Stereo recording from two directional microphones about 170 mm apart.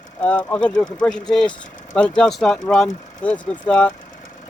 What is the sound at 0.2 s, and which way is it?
Speech, 10° left (ahead or behind).